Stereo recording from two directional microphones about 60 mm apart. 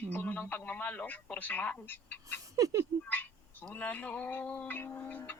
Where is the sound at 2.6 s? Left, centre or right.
Right.